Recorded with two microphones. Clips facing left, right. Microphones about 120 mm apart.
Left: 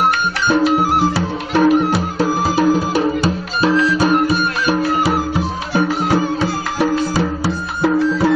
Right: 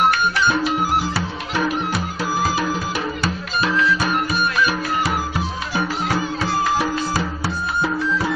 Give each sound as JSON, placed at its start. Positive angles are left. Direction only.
{"t": 1.5, "sound": "music", "side_deg": 45}